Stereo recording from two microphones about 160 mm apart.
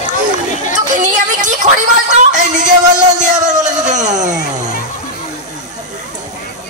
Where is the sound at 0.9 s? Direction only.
50° right (ahead or behind).